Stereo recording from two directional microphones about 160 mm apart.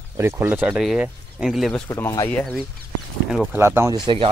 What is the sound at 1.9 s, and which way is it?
Speech, 20° left (ahead or behind).